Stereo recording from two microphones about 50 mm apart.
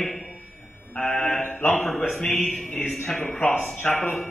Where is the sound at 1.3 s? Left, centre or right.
Left.